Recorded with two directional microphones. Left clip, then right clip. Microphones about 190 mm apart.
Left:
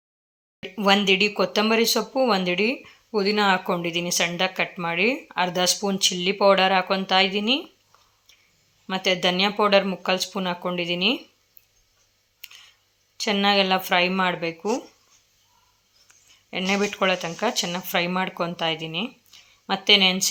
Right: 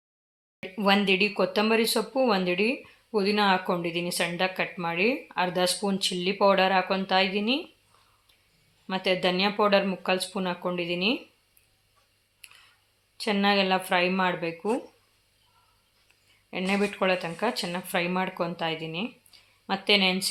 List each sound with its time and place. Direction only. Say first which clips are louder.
0.6 s speech: left 4 dB; 25° left (ahead or behind)
9.0 s speech: left 4 dB; 25° left (ahead or behind)
13.1 s speech: left 4 dB; 25° left (ahead or behind)
16.5 s speech: left 4 dB; 20° left (ahead or behind)